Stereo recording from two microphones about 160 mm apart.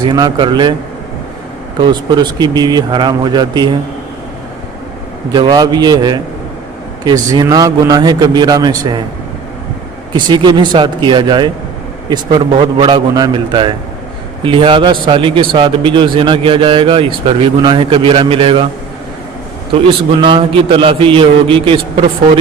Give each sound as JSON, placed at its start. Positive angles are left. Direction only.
{"t": 0.0, "sound": "a man's voice", "side_deg": -30}
{"t": 1.8, "sound": "a man's voice", "side_deg": -25}
{"t": 5.3, "sound": "a man's voice", "side_deg": -25}
{"t": 10.2, "sound": "a man's voice", "side_deg": -30}
{"t": 20.2, "sound": "a man's voice", "side_deg": -30}